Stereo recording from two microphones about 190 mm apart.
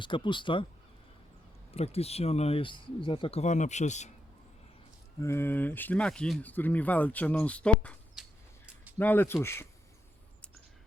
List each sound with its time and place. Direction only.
0.0 s speech: 25° left (ahead or behind)
1.7 s speech: 35° left (ahead or behind)
5.2 s speech: 15° left (ahead or behind)